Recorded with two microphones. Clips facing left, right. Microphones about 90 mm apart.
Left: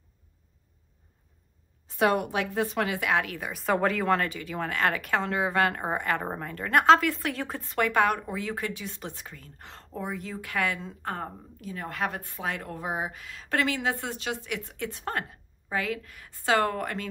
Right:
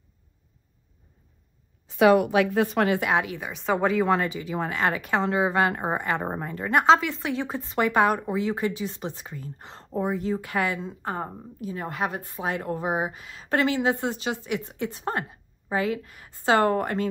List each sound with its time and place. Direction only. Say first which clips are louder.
2.0 s a woman's voice: right 7 dB; 90° right; by 3.0 s 55° right (ahead or behind)
3.3 s a woman's voice: right 1 dB; centre (ahead or behind); by 10.6 s 30° right (ahead or behind)
10.8 s speech: right 3 dB; 10° right (ahead or behind)
12.0 s speech: right 1 dB; 10° right (ahead or behind)
12.4 s a woman's voice: right 5 dB; 25° right (ahead or behind)